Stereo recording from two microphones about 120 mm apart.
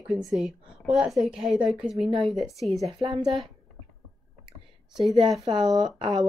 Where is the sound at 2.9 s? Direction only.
50° right (ahead or behind).